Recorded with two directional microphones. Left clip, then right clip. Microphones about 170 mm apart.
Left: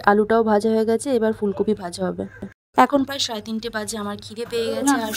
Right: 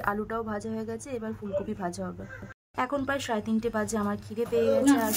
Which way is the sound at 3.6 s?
40° left (ahead or behind).